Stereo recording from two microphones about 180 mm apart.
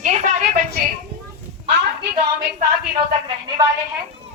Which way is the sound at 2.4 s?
65° right (ahead or behind).